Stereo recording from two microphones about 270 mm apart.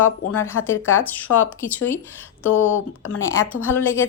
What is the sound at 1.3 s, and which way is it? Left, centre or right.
Speech, left.